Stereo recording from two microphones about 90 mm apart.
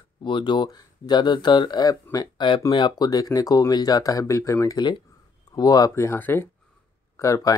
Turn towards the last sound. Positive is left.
turn(degrees=35)  # may be behind; listen again after turning